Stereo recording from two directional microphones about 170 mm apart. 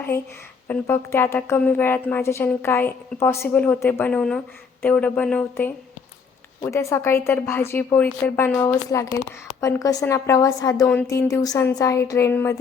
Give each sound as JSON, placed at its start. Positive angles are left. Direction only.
{"t": 0.7, "sound": "a woman's voice", "side_deg": 15}